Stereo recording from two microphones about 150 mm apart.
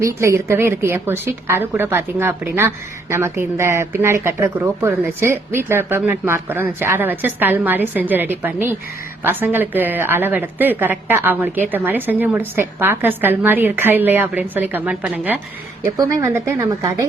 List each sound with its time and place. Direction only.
0.0 s a woman's voice: 20° right (ahead or behind)